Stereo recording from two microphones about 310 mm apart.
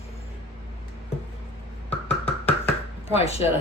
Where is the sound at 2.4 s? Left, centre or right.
Centre.